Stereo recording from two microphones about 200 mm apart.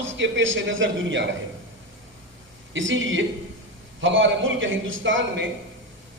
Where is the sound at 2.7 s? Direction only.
70° right (ahead or behind).